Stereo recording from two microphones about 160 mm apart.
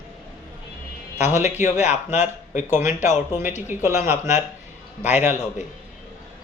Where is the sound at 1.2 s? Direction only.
45° left (ahead or behind).